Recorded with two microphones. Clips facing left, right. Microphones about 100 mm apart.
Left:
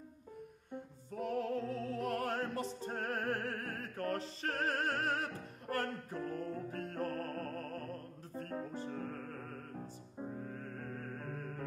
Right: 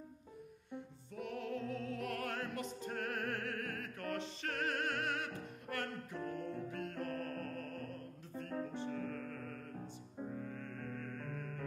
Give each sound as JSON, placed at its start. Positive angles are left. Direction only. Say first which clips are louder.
{"t": 0.7, "sound": "music", "louder": "left 2 dB", "side_deg": 40}